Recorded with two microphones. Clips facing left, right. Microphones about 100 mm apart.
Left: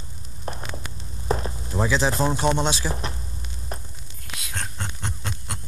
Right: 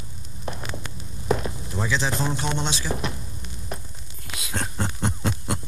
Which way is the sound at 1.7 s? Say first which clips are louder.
Left 4 dB; 35° left (ahead or behind).